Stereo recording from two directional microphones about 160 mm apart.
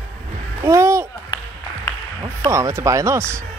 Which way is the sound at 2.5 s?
20° right (ahead or behind).